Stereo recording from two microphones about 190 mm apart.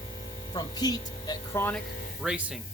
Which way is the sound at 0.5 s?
20° left (ahead or behind).